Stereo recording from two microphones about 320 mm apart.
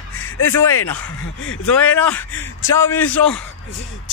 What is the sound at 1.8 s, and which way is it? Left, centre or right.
Speech, centre.